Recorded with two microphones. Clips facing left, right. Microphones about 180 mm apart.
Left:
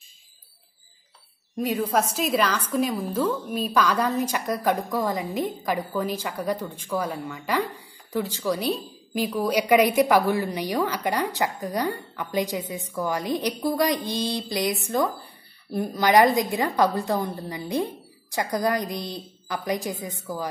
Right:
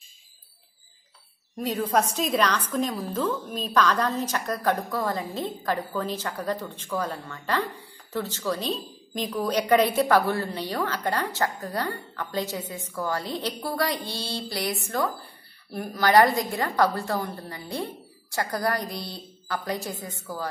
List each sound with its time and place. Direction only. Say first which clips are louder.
1.6 s a woman's voice: left 1 dB; 10° left (ahead or behind)